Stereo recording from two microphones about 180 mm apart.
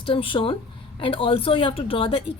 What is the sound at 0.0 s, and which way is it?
A woman's voice, 30° left (ahead or behind).